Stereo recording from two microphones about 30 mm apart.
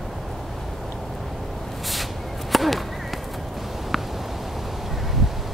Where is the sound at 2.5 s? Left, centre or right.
Centre.